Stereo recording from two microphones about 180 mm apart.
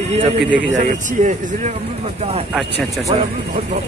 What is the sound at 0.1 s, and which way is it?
A man's voice, 35° right (ahead or behind).